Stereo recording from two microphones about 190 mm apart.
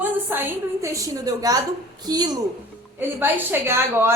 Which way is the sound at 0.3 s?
10° right (ahead or behind).